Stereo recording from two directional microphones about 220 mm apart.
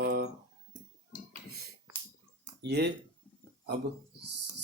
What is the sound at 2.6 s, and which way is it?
Mantra, 50° right (ahead or behind).